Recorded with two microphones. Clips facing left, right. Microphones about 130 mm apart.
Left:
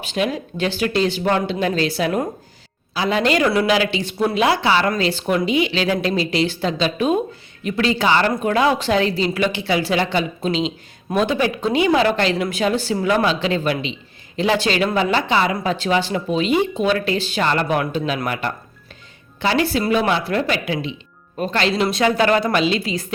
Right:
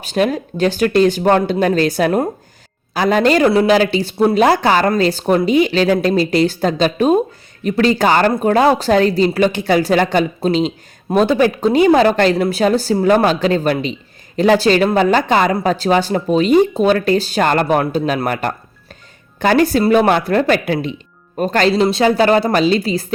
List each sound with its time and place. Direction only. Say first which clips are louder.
0.0 s speech: right 5 dB; 45° right (ahead or behind)
21.8 s speech: right 2 dB; 30° right (ahead or behind)